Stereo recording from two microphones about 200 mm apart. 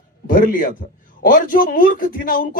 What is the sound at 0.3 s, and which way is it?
A man's voice, 45° left (ahead or behind).